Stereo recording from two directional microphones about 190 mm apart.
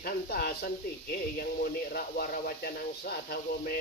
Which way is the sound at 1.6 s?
55° left (ahead or behind).